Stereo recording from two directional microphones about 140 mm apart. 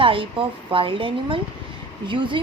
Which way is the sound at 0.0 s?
40° right (ahead or behind).